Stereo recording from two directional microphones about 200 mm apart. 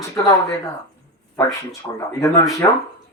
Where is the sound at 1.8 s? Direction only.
15° left (ahead or behind).